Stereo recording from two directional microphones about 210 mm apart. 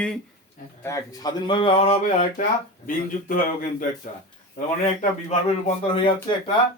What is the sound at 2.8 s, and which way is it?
A man's voice, 40° left (ahead or behind).